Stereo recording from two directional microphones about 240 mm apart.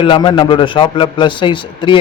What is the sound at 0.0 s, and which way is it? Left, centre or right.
A man's voice, centre.